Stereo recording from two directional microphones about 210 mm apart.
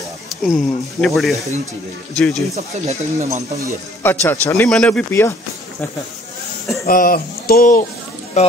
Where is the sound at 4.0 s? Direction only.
10° left (ahead or behind).